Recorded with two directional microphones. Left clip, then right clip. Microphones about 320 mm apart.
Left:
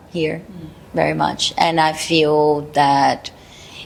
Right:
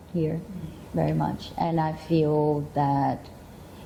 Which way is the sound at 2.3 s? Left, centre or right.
Centre.